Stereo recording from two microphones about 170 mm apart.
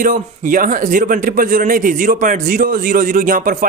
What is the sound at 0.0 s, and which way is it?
Speech, 50° right (ahead or behind).